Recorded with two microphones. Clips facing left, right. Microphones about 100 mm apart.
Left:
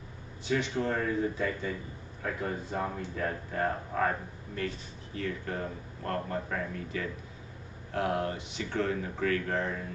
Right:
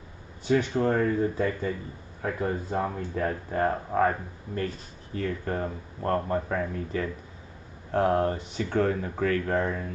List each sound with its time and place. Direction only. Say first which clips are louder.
0.5 s speech: right 6 dB; 40° right (ahead or behind)
5.1 s speech: right 5 dB; 40° right (ahead or behind)